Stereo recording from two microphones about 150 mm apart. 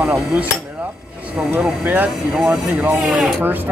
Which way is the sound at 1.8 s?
10° right (ahead or behind).